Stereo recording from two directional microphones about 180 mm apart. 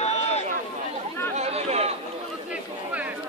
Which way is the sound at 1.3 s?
35° right (ahead or behind).